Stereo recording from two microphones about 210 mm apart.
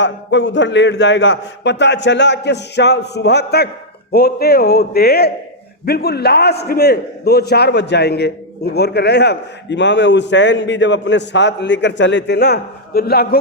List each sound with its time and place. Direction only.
0.0 s a man's voice: 60° left (ahead or behind)